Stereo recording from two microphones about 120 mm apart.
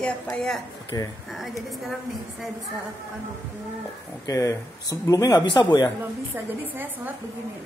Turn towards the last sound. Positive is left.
turn(degrees=-15)  # may be behind; listen again after turning